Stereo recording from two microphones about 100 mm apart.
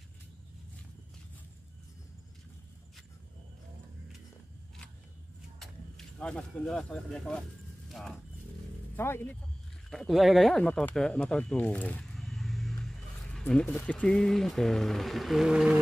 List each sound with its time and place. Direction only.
5.6 s speech: 5° left (ahead or behind)
8.9 s speech: 20° left (ahead or behind)
9.8 s speech: centre (ahead or behind)
12.2 s vehicle: centre (ahead or behind)
13.5 s speech: 10° left (ahead or behind); by 15.8 s 10° right (ahead or behind)